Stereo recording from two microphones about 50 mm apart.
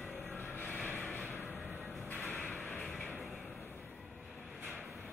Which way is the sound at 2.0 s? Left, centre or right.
Left.